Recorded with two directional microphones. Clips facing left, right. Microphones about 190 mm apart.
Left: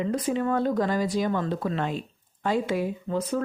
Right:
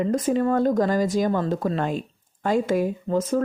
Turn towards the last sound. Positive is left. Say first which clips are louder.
# right 5 dB
turn(degrees=-45)  # may be behind; listen again after turning